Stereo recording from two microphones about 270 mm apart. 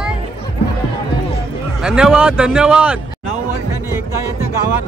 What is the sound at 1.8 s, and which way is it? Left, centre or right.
A man's voice, centre.